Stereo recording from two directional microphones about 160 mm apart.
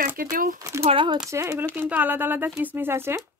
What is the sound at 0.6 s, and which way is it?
Speech, 20° right (ahead or behind).